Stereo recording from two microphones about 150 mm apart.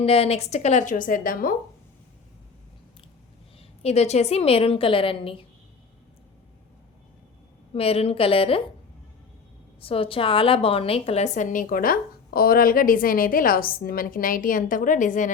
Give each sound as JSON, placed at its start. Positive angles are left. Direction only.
{"t": 0.0, "sound": "speech", "side_deg": 40}
{"t": 3.8, "sound": "a woman's voice", "side_deg": 45}
{"t": 7.7, "sound": "a woman's voice", "side_deg": 40}
{"t": 9.8, "sound": "a woman's voice", "side_deg": 40}